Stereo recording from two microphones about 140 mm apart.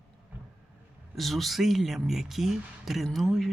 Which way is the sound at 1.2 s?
Centre (ahead or behind).